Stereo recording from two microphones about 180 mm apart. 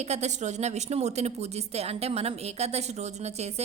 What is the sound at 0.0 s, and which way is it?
A woman's voice, 40° right (ahead or behind).